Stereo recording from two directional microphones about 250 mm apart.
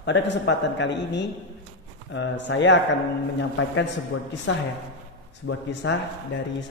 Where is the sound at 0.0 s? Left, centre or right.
Left.